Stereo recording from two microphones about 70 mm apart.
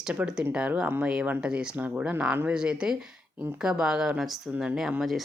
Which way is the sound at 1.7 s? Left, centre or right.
Right.